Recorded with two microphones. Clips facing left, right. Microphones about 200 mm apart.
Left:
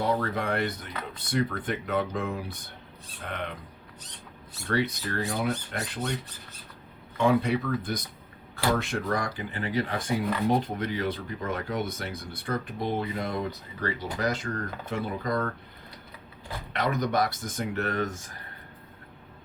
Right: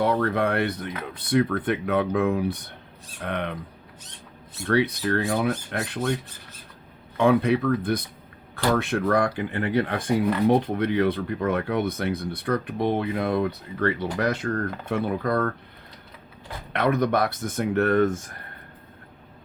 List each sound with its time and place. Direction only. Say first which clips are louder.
0.0 s speech: right 5 dB; 60° right (ahead or behind)
4.7 s speech: right 6 dB; 65° right (ahead or behind)
7.2 s speech: right 4 dB; 60° right (ahead or behind)
16.7 s speech: right 5 dB; 60° right (ahead or behind)